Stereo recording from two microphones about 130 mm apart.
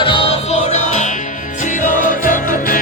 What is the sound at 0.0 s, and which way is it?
Music, 40° left (ahead or behind).